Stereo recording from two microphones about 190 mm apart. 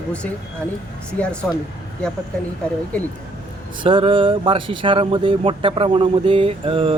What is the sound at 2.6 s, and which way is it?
Speech, 5° left (ahead or behind).